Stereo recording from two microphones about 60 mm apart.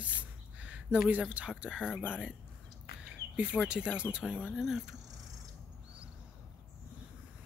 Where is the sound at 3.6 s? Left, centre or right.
Centre.